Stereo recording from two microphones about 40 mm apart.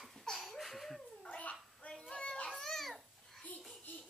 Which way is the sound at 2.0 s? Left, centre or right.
Left.